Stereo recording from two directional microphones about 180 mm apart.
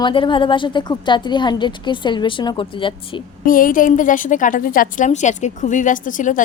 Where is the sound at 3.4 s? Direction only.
50° left (ahead or behind).